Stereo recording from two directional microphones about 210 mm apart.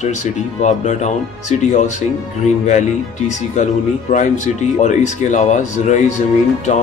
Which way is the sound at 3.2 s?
35° left (ahead or behind).